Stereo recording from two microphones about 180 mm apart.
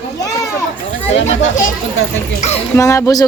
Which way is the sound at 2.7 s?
15° left (ahead or behind).